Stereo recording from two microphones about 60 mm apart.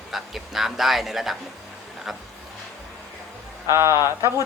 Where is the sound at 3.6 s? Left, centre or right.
Right.